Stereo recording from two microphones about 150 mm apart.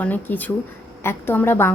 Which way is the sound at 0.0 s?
10° left (ahead or behind).